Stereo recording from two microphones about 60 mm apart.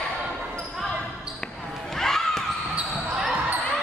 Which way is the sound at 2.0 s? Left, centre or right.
Centre.